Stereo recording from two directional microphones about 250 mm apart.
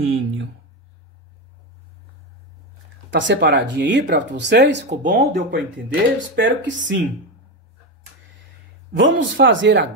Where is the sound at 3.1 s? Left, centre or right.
Right.